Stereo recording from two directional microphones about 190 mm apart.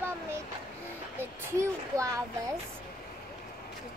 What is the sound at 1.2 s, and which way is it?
A child's voice, 15° right (ahead or behind).